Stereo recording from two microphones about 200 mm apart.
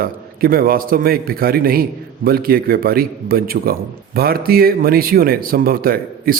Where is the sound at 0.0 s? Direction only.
45° right (ahead or behind).